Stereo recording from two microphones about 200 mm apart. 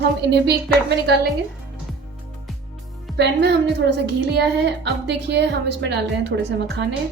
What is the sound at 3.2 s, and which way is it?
A woman's voice, 60° right (ahead or behind).